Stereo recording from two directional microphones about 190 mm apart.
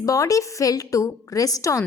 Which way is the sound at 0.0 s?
15° left (ahead or behind).